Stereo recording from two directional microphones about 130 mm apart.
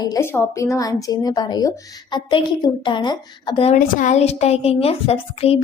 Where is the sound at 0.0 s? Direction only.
25° left (ahead or behind).